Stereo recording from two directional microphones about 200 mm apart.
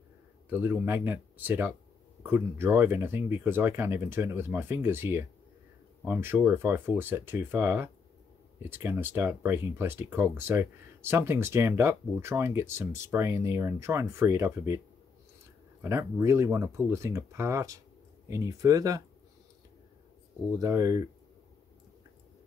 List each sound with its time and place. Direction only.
0.5 s speech: 10° right (ahead or behind)
15.8 s speech: 15° right (ahead or behind)
20.5 s speech: 15° right (ahead or behind)